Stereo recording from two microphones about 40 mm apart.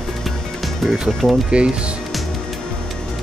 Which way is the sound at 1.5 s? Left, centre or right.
Right.